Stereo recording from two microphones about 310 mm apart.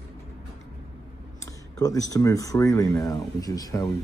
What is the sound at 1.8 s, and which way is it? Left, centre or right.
Speech, centre.